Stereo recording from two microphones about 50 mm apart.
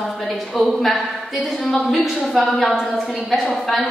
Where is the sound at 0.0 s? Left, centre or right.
Centre.